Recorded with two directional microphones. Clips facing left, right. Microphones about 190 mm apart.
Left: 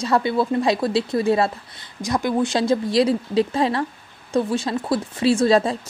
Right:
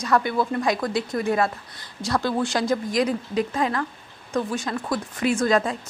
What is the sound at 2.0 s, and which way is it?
A woman's voice, 15° left (ahead or behind).